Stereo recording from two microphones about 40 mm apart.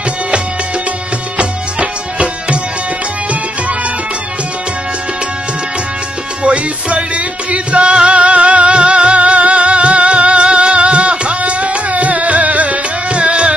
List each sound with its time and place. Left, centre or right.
1.4 s music: right
6.4 s music: right